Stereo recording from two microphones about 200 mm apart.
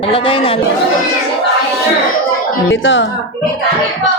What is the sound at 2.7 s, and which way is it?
Speech, 70° left (ahead or behind).